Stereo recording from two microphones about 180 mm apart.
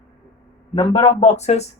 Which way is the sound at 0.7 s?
30° left (ahead or behind).